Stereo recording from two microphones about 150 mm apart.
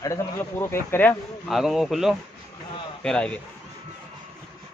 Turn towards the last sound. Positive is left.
turn(degrees=5)  # may be behind; listen again after turning